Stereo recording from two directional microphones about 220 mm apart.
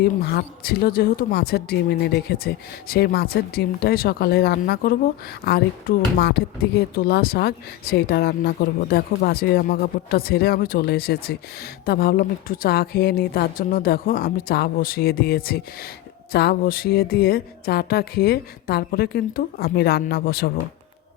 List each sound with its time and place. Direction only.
0.0 s speech: 45° left (ahead or behind)